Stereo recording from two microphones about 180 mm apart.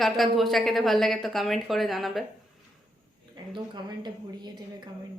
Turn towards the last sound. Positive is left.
turn(degrees=-25)  # may be behind; listen again after turning